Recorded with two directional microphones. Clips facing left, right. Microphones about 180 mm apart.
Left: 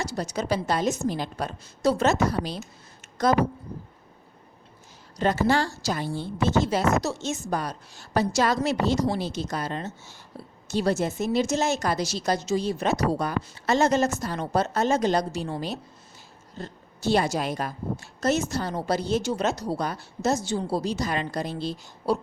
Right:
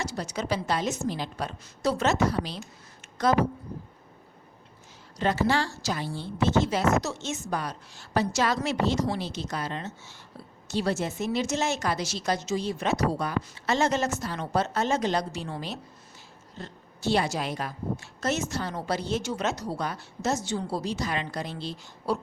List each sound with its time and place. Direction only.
0.0 s a woman's voice: 40° left (ahead or behind)
5.1 s a woman's voice: 45° left (ahead or behind)